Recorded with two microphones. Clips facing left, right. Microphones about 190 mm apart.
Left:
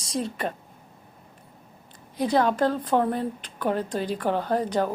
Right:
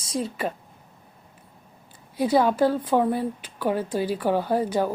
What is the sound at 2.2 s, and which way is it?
A woman's voice, 10° right (ahead or behind).